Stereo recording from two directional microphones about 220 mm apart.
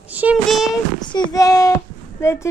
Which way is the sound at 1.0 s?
20° left (ahead or behind).